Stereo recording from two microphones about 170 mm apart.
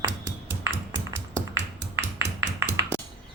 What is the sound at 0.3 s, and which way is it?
Ping, 90° right.